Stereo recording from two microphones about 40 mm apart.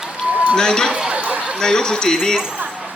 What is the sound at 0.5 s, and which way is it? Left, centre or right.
Speech, centre.